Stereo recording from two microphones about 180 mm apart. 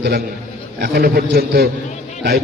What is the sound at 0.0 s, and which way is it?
A man's voice, 65° right (ahead or behind).